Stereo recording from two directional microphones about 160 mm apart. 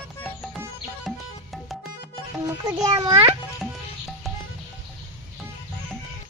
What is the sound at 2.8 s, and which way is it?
Speech, 20° right (ahead or behind).